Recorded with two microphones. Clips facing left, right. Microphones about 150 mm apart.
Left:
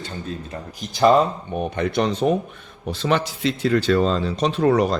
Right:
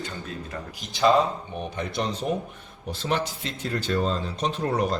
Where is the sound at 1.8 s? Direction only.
65° left (ahead or behind).